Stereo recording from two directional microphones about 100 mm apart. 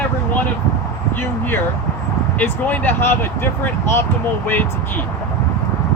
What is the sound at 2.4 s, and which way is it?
Speech, 20° left (ahead or behind).